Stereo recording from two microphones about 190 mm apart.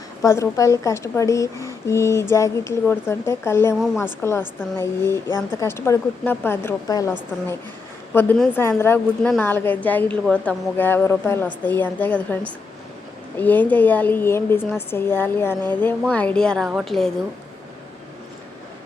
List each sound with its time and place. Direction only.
0.2 s a woman's voice: 15° left (ahead or behind)
8.1 s a woman's voice: 10° left (ahead or behind)
13.4 s a woman's voice: 10° left (ahead or behind)